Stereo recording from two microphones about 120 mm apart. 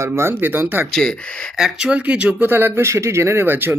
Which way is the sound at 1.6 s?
5° right (ahead or behind).